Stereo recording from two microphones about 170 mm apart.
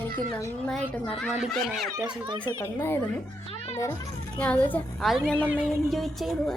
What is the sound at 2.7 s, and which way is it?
Speech, 15° left (ahead or behind).